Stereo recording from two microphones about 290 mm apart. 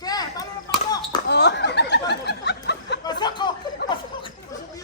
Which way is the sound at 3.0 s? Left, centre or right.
Centre.